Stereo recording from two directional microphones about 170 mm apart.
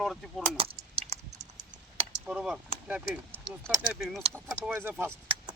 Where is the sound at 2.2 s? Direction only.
5° right (ahead or behind).